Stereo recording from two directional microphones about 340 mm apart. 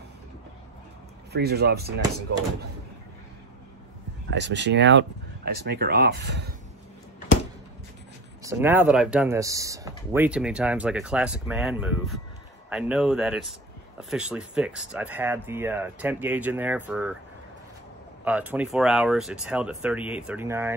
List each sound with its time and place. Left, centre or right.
1.3 s speech: right
4.3 s speech: right
8.5 s speech: centre
18.2 s speech: centre